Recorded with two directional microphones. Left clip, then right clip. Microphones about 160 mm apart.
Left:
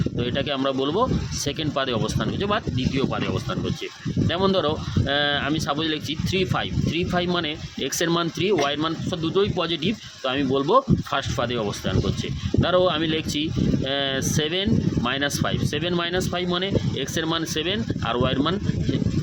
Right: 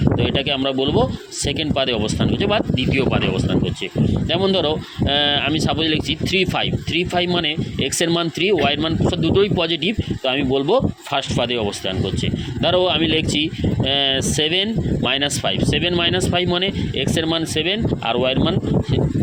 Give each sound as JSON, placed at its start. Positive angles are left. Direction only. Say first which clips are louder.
{"t": 0.2, "sound": "speech", "louder": "right 5 dB", "side_deg": -10}
{"t": 2.9, "sound": "speech", "louder": "right 6 dB", "side_deg": -20}
{"t": 4.3, "sound": "speech", "louder": "right 3 dB", "side_deg": -5}
{"t": 12.6, "sound": "speech", "louder": "right 4 dB", "side_deg": -10}